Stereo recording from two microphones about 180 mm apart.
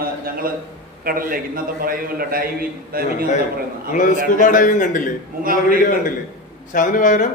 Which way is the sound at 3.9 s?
45° left (ahead or behind).